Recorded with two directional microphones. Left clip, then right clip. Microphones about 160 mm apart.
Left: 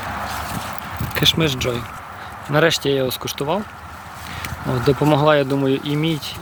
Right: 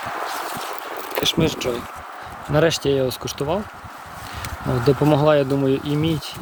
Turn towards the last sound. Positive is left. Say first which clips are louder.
# left 1 dB
turn(degrees=0)  # may be behind; listen again after turning